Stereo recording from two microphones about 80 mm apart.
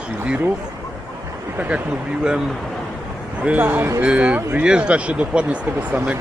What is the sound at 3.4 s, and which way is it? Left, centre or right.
Speech, centre.